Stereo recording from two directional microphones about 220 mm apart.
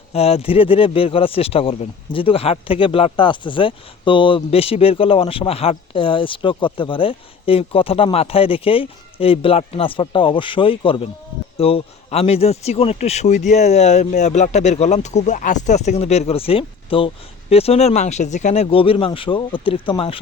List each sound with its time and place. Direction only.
0.1 s speech: 25° left (ahead or behind)